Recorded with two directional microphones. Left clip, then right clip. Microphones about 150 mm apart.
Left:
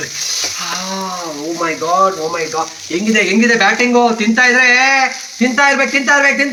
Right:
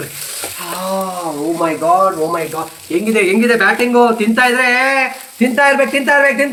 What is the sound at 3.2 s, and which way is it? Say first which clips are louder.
A man's voice: left 1 dB; 5° left (ahead or behind).